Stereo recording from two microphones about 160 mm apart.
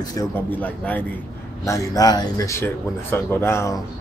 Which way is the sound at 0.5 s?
10° left (ahead or behind).